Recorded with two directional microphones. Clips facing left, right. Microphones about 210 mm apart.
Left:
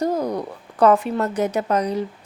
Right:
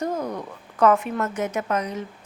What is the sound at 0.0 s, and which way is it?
A woman's voice, 35° left (ahead or behind).